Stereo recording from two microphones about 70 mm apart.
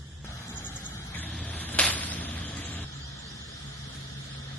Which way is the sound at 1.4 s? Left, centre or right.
Left.